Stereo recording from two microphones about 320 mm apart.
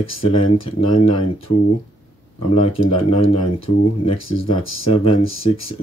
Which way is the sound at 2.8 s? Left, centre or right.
Left.